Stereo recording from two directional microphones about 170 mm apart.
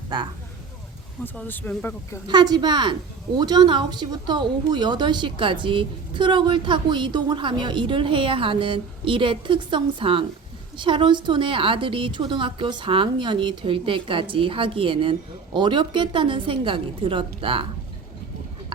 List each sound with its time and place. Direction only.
1.2 s speech: 10° left (ahead or behind)
2.2 s a woman's voice: 25° right (ahead or behind)